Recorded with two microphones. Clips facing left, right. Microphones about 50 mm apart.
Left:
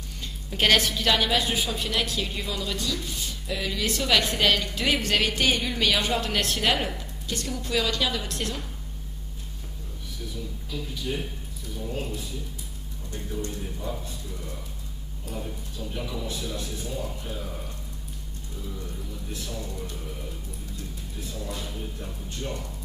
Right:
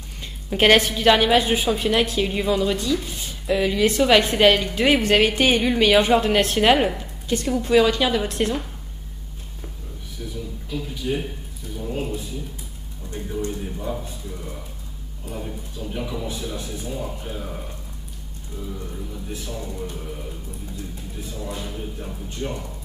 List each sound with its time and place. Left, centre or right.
0.5 s a woman's voice: right
10.3 s a sound: centre
11.7 s speech: centre
18.7 s speech: centre
21.4 s speech: centre